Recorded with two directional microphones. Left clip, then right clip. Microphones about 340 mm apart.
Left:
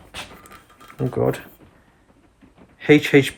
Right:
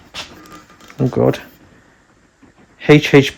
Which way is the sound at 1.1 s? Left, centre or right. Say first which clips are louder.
Right 6 dB; right.